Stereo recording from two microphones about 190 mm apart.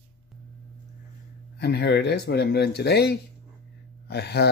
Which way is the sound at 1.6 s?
60° left (ahead or behind).